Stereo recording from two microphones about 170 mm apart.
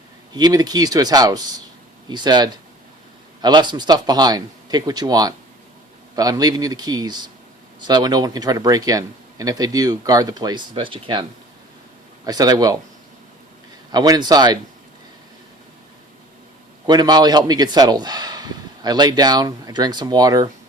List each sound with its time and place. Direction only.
0.3 s speech: 25° right (ahead or behind)
13.9 s speech: 25° right (ahead or behind)
16.8 s speech: 25° right (ahead or behind)